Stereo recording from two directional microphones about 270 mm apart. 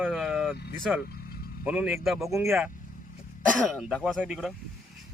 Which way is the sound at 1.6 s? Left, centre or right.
Centre.